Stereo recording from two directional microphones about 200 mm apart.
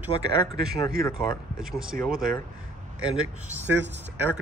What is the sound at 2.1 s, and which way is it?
Speech, 45° right (ahead or behind).